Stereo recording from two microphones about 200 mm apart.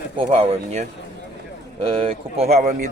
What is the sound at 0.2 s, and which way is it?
Speech, 30° right (ahead or behind).